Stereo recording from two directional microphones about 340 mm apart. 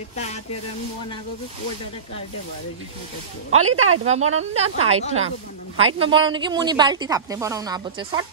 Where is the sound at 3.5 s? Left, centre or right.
Right.